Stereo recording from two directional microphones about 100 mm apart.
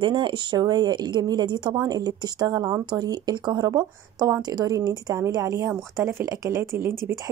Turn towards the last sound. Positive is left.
turn(degrees=-35)  # may be behind; listen again after turning